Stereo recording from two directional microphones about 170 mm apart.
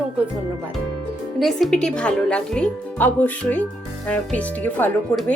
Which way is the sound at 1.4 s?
Centre (ahead or behind).